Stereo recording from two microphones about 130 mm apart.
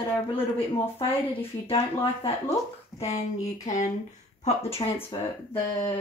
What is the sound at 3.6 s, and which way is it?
Speech, 65° left (ahead or behind).